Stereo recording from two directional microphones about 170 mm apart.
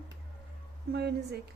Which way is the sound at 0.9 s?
75° right (ahead or behind).